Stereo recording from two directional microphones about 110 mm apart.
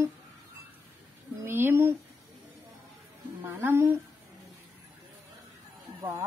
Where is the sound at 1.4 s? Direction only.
20° right (ahead or behind).